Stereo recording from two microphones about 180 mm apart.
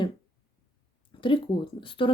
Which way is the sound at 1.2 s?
25° left (ahead or behind).